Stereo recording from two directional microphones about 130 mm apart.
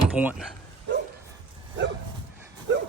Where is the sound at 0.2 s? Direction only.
10° right (ahead or behind).